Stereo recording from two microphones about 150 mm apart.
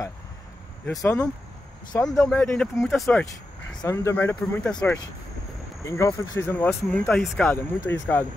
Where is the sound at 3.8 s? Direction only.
20° left (ahead or behind).